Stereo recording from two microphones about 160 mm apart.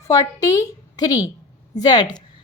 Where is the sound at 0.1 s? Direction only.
25° left (ahead or behind).